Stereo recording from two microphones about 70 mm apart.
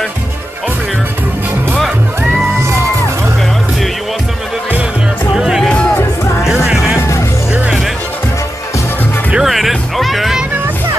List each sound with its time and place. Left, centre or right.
5.3 s music: centre
5.6 s music: centre
6.4 s music: centre
7.0 s music: left
9.3 s music: centre